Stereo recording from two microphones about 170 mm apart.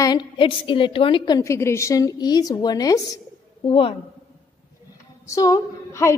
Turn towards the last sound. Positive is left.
turn(degrees=20)  # may be behind; listen again after turning